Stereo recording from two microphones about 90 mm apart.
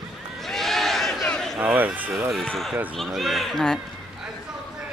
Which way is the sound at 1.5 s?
20° right (ahead or behind).